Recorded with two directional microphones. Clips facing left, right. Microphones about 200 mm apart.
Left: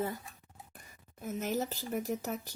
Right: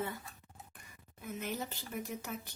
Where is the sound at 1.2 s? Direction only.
40° left (ahead or behind).